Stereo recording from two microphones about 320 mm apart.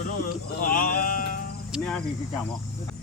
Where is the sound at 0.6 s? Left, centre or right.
Left.